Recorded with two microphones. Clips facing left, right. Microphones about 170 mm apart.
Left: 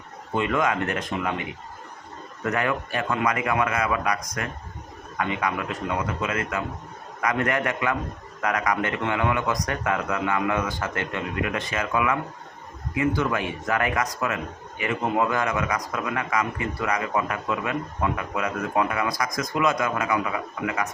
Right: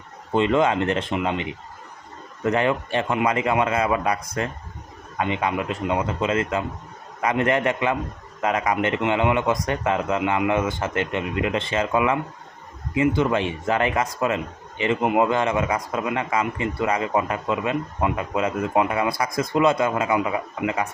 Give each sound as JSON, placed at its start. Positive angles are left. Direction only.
{"t": 0.3, "sound": "speech", "side_deg": -25}